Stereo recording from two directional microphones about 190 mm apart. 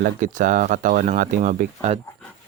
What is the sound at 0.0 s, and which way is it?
Speech, 45° right (ahead or behind).